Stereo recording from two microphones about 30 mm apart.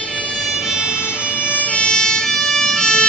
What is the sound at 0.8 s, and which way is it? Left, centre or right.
Emergency vehicle, right.